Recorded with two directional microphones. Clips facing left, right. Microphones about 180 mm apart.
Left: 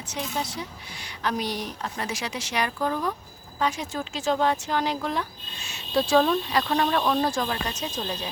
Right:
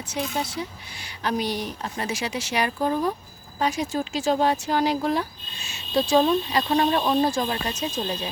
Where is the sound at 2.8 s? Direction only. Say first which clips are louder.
Right 4 dB; 30° right (ahead or behind).